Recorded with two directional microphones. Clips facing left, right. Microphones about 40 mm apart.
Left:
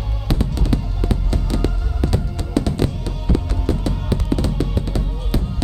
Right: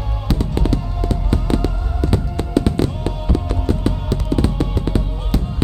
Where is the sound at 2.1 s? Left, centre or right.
Right.